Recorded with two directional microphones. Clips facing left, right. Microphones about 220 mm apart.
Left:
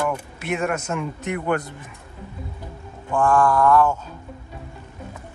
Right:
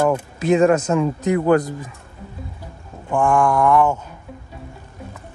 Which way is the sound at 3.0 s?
15° right (ahead or behind).